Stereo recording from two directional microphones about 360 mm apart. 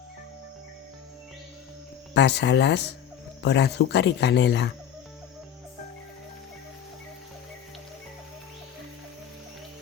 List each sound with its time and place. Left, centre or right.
2.1 s speech: left